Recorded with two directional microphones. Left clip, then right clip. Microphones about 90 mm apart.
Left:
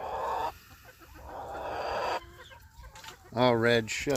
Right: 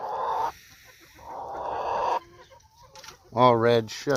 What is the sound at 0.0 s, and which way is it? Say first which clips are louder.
Chicken: right 5 dB; 90° right.